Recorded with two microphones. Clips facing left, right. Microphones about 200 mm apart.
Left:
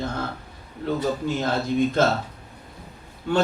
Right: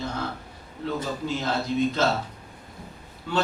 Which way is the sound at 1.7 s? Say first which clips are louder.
Left 3 dB; 50° left (ahead or behind).